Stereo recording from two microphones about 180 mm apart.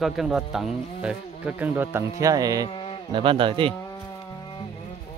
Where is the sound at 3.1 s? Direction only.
30° right (ahead or behind).